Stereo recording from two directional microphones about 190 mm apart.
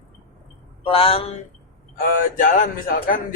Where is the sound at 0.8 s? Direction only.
30° left (ahead or behind).